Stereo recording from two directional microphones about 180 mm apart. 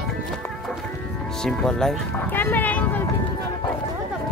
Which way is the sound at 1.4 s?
5° left (ahead or behind).